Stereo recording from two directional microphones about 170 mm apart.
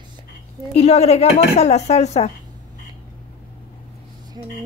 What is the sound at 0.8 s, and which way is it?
Speech, 35° left (ahead or behind).